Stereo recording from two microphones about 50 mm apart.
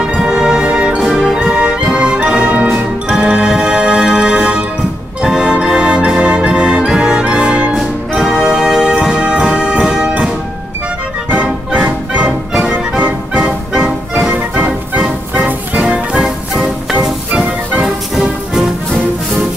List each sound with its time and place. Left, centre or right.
0.0 s music: centre
7.7 s music: centre
11.4 s music: right
14.5 s music: right
15.8 s music: centre
17.8 s music: centre